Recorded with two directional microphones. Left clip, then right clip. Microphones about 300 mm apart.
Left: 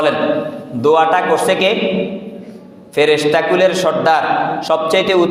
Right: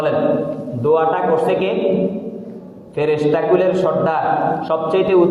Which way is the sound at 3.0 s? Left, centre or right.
Left.